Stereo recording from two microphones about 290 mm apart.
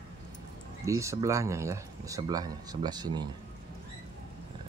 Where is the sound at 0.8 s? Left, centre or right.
Centre.